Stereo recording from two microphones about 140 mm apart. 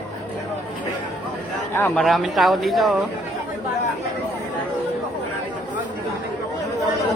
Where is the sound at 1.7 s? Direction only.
15° left (ahead or behind).